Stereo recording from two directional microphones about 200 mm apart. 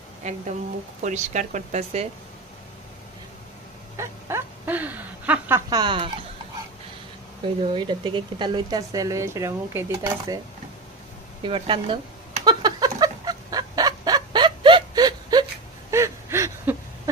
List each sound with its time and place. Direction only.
0.2 s a woman's voice: 35° right (ahead or behind)
3.9 s a sound: 15° right (ahead or behind)
5.7 s a woman's voice: 20° right (ahead or behind)
7.7 s speech: 25° right (ahead or behind)
11.4 s a woman's voice: 25° right (ahead or behind)
12.4 s fowl: 20° right (ahead or behind)
15.9 s a sound: 15° right (ahead or behind)